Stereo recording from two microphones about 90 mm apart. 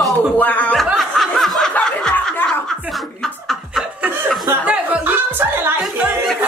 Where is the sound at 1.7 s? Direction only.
10° left (ahead or behind).